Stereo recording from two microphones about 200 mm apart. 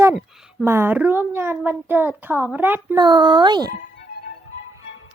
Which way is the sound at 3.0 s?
20° right (ahead or behind).